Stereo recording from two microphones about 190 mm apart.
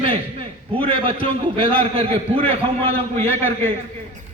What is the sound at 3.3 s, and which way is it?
Speech, 10° left (ahead or behind).